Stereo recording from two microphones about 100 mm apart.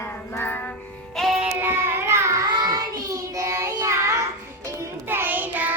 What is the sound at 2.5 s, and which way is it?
Child singing, 40° right (ahead or behind).